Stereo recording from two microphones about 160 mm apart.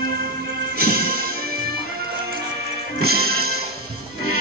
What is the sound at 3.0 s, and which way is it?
Music, 75° right (ahead or behind).